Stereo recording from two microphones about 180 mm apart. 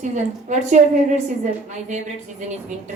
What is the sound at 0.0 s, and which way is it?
A woman's voice, 45° right (ahead or behind).